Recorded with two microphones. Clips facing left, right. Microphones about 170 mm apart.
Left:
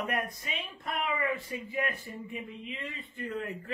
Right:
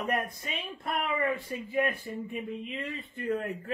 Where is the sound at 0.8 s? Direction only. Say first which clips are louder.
Right 2 dB; 35° right (ahead or behind).